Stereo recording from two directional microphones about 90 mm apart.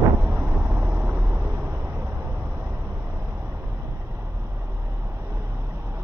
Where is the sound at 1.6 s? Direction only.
25° right (ahead or behind).